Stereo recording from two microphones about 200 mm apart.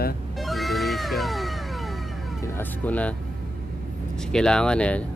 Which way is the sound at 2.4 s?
5° left (ahead or behind).